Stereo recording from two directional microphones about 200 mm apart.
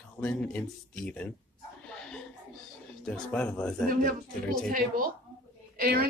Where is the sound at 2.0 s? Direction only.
5° left (ahead or behind).